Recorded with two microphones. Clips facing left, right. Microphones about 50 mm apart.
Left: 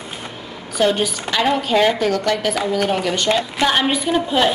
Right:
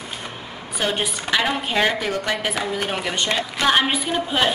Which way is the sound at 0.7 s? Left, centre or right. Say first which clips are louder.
Left 6 dB; centre.